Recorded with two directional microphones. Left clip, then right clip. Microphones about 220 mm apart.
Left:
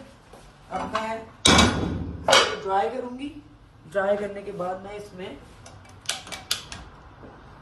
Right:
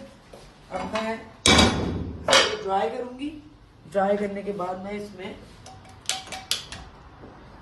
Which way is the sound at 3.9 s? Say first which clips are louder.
Right 1 dB; 25° right (ahead or behind).